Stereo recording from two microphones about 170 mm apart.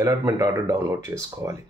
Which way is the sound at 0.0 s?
20° right (ahead or behind).